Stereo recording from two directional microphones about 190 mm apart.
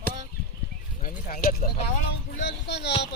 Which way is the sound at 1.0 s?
45° left (ahead or behind).